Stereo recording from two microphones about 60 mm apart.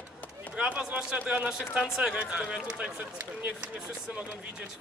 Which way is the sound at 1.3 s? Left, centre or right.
Centre.